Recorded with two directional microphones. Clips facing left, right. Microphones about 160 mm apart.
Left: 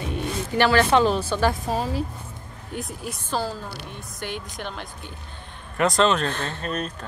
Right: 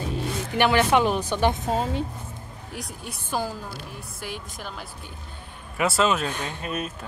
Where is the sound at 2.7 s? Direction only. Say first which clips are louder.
Left 5 dB; 5° right (ahead or behind).